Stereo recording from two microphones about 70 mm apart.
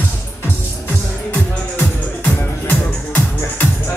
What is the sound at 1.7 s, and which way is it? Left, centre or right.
Music, left.